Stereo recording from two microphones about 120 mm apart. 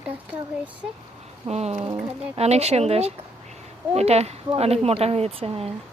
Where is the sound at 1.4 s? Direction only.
65° right (ahead or behind).